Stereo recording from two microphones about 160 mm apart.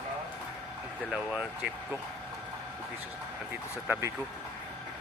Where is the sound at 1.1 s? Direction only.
5° right (ahead or behind).